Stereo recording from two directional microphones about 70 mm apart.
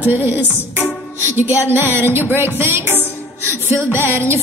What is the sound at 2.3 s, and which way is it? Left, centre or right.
Speech, right.